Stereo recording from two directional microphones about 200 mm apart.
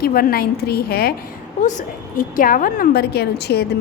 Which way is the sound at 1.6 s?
40° left (ahead or behind).